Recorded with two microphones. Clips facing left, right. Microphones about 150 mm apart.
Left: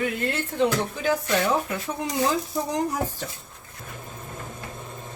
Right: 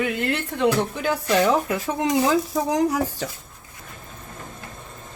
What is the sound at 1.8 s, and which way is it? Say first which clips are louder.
Speech: right 5 dB; 90° right.